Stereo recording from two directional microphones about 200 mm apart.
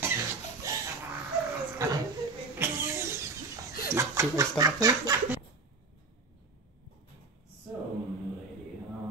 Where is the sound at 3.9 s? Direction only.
15° right (ahead or behind).